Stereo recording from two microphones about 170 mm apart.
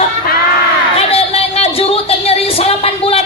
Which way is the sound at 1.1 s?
35° left (ahead or behind).